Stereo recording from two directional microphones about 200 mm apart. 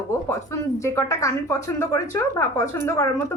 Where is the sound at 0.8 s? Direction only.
15° left (ahead or behind).